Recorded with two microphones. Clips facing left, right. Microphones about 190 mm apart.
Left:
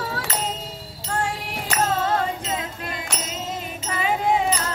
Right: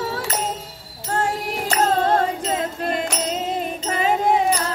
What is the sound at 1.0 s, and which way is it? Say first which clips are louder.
Music: right 4 dB; 40° right (ahead or behind).